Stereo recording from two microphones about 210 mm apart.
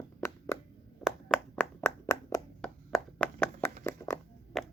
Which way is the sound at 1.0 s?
5° left (ahead or behind).